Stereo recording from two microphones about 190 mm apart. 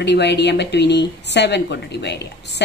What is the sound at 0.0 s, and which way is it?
A woman's voice, 65° left (ahead or behind).